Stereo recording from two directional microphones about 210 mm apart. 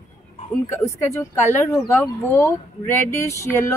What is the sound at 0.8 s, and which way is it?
Speech, 15° left (ahead or behind).